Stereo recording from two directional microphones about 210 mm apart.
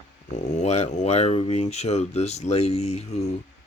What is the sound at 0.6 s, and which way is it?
Speech, 30° left (ahead or behind).